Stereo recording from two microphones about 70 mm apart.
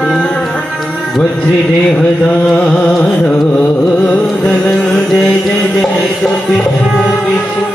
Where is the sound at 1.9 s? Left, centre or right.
Centre.